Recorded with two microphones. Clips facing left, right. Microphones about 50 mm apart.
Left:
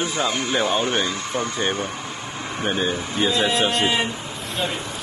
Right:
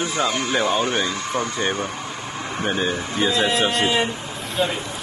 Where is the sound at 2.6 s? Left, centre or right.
Centre.